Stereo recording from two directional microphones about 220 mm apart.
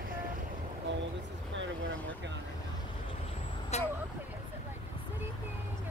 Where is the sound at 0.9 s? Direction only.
55° right (ahead or behind).